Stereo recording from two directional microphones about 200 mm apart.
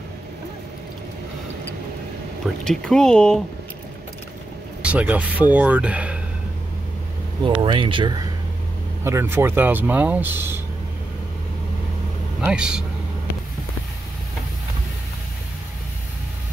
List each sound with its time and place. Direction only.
2.6 s speech: 5° left (ahead or behind)
4.8 s speech: 5° right (ahead or behind)
7.4 s speech: 25° right (ahead or behind)
9.0 s speech: 10° right (ahead or behind)
12.4 s speech: 5° right (ahead or behind)